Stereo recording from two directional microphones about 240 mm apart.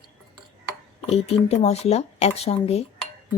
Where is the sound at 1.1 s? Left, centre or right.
Left.